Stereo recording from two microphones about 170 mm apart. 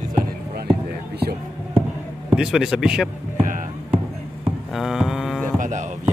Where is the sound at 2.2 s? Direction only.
5° right (ahead or behind).